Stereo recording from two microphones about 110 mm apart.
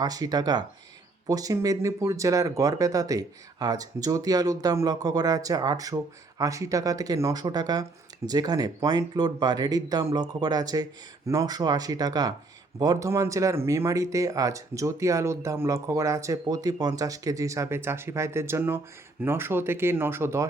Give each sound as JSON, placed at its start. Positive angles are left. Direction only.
{"t": 0.0, "sound": "speech", "side_deg": -35}